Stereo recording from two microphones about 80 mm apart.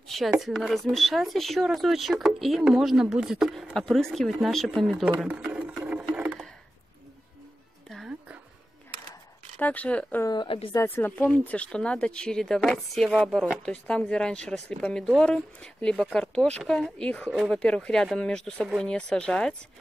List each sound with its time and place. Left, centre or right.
0.4 s speech: centre
5.5 s music: centre
6.1 s a sound: centre
9.6 s speech: centre
10.3 s speech: left
10.7 s speech: left; by 19.5 s centre